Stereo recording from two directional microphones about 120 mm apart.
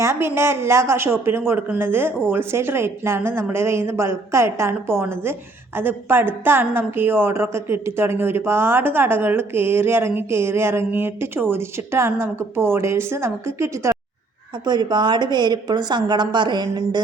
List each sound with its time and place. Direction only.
0.0 s a woman's voice: 20° right (ahead or behind)
14.6 s a woman's voice: 35° right (ahead or behind)